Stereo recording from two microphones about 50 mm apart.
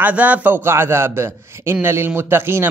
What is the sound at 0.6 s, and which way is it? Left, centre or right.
A man's voice, right.